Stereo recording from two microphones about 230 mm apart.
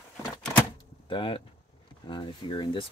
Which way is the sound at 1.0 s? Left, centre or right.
Left.